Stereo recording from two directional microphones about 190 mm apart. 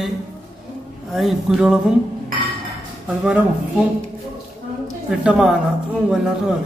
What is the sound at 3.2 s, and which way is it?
Speech, 5° right (ahead or behind).